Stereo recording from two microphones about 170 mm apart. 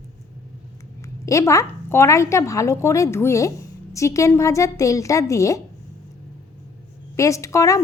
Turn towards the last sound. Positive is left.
turn(degrees=20)  # may be behind; listen again after turning